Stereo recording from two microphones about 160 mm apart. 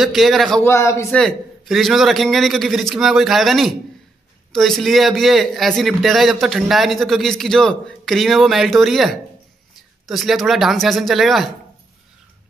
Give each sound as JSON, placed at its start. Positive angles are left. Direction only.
{"t": 0.0, "sound": "a man's voice", "side_deg": 0}
{"t": 0.7, "sound": "a man's voice", "side_deg": 15}
{"t": 1.1, "sound": "a man's voice", "side_deg": 0}